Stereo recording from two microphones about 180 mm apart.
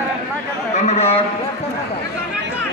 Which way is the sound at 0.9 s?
35° left (ahead or behind).